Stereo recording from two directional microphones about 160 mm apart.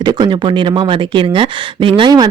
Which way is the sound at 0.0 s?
25° right (ahead or behind).